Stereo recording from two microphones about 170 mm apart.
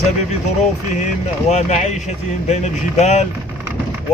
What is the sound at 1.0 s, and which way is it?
Speech, 40° left (ahead or behind).